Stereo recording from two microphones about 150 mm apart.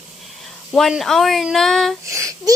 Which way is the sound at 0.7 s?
Centre (ahead or behind).